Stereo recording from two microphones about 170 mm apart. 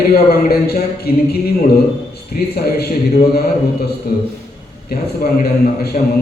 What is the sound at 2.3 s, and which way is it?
A man's voice, 65° left (ahead or behind).